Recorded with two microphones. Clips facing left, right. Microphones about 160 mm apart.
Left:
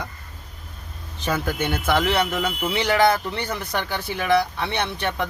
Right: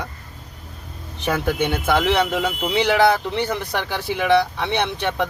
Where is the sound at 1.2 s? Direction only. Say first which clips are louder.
Right 3 dB; 15° right (ahead or behind).